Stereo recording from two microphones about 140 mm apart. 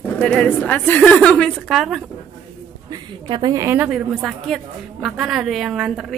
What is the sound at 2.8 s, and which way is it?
Speech, 30° right (ahead or behind).